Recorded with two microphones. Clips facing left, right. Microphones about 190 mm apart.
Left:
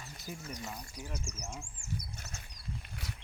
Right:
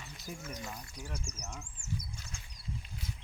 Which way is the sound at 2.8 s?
70° left (ahead or behind).